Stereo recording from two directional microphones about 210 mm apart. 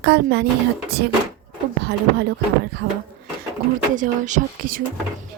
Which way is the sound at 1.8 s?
50° right (ahead or behind).